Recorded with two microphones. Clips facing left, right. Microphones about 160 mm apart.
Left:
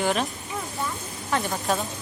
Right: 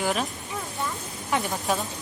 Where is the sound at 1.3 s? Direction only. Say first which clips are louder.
Even; 15° right (ahead or behind).